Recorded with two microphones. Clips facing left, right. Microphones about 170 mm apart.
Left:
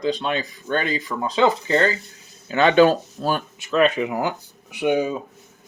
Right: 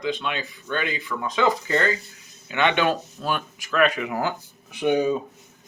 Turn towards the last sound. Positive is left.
turn(degrees=10)  # may be behind; listen again after turning